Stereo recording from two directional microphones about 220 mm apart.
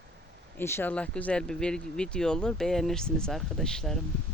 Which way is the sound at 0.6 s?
10° left (ahead or behind).